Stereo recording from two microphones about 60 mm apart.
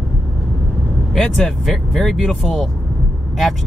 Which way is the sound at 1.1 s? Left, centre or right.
Centre.